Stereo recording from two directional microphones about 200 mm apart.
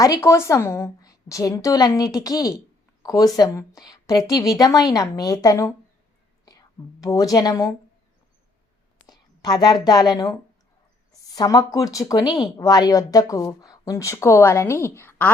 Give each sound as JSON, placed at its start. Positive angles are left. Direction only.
{"t": 0.0, "sound": "speech", "side_deg": 15}
{"t": 6.5, "sound": "whispering", "side_deg": 15}
{"t": 7.0, "sound": "speech", "side_deg": 15}
{"t": 9.0, "sound": "a woman's voice", "side_deg": 20}
{"t": 11.3, "sound": "speech", "side_deg": 20}